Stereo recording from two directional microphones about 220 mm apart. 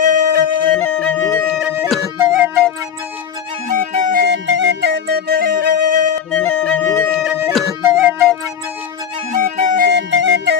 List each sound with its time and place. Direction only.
0.0 s music: 35° right (ahead or behind)
0.8 s music: 5° left (ahead or behind)
1.5 s music: 5° right (ahead or behind)
3.7 s music: 35° right (ahead or behind)
6.3 s flute: 5° left (ahead or behind)
7.2 s music: 5° right (ahead or behind)
9.3 s music: 35° right (ahead or behind); by 10.6 s 50° right (ahead or behind)